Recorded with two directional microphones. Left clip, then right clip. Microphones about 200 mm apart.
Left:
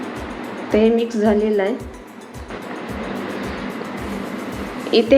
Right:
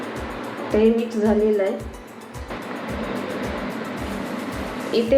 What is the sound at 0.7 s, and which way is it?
Speech, 55° left (ahead or behind).